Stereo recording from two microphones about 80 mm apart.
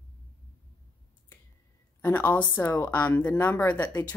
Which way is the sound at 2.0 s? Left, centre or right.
Left.